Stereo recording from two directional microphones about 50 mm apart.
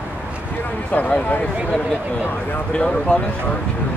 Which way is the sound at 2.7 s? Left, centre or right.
Left.